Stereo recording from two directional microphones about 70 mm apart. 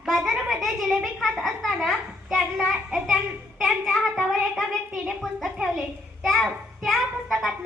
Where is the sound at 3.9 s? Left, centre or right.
Centre.